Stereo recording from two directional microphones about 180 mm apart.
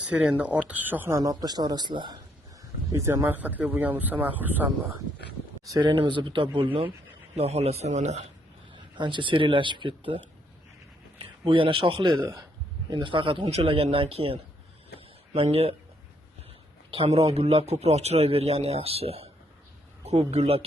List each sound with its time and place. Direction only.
0.0 s speech: 5° right (ahead or behind)
5.7 s a man's voice: 25° right (ahead or behind)
9.0 s a man's voice: 25° right (ahead or behind)
14.9 s a sound: 35° right (ahead or behind)
16.9 s a man's voice: 35° right (ahead or behind)